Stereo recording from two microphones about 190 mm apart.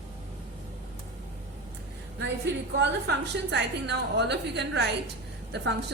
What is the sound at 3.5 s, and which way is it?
A woman's voice, 65° right (ahead or behind).